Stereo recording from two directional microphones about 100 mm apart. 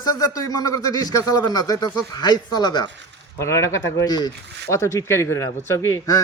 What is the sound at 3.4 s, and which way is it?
Speech, 30° left (ahead or behind).